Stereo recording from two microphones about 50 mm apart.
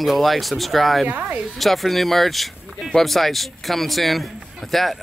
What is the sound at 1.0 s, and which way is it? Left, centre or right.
Speech, right.